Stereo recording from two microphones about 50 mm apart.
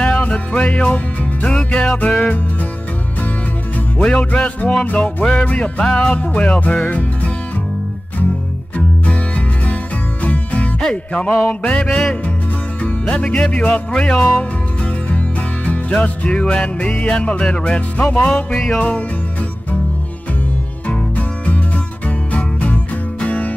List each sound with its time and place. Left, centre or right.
0.0 s music: left
4.0 s music: left
8.7 s music: left
10.8 s music: centre
11.9 s music: centre
14.1 s music: centre
15.1 s music: left
18.1 s music: centre
18.8 s music: left
20.8 s music: left